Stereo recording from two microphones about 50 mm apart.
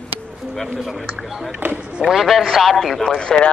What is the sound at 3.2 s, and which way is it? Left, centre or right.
Speech, centre.